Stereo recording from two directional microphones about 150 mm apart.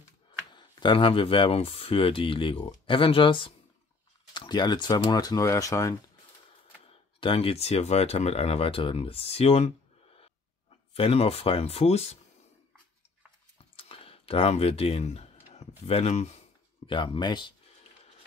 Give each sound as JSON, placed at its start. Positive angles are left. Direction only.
{"t": 0.5, "sound": "speech", "side_deg": 30}
{"t": 6.9, "sound": "speech", "side_deg": 35}
{"t": 11.0, "sound": "speech", "side_deg": 40}
{"t": 13.6, "sound": "a sound", "side_deg": 40}
{"t": 15.8, "sound": "speech", "side_deg": 45}
{"t": 16.8, "sound": "speech", "side_deg": 35}